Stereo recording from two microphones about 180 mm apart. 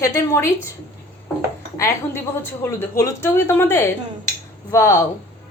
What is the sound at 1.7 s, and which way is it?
A woman's voice, 15° left (ahead or behind).